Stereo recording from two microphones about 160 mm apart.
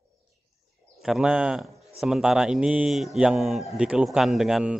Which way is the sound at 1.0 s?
5° right (ahead or behind).